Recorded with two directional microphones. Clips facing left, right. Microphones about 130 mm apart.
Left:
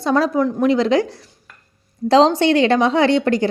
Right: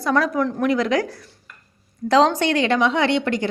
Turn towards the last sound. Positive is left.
turn(degrees=35)  # may be behind; listen again after turning